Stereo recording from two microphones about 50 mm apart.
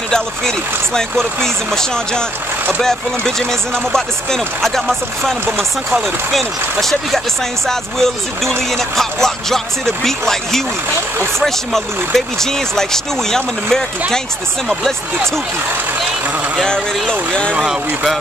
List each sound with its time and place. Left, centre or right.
0.9 s speech: centre
5.9 s speech: centre
6.8 s speech: centre
17.1 s speech: centre